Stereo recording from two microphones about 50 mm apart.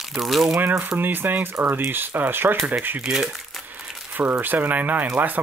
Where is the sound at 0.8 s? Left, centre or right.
Right.